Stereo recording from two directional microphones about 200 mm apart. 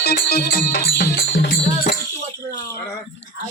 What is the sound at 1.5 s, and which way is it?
Music, 40° left (ahead or behind).